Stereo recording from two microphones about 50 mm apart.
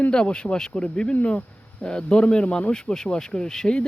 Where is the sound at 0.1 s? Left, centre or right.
Centre.